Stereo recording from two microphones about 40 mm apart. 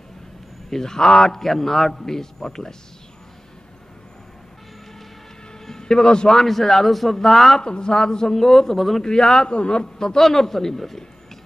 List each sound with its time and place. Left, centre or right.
0.7 s a man's voice: centre
5.7 s a man's voice: centre
9.0 s a man's voice: centre